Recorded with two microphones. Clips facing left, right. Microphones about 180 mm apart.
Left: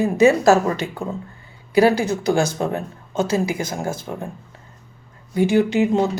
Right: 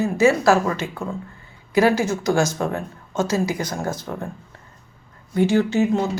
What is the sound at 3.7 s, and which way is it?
Speech, 10° left (ahead or behind).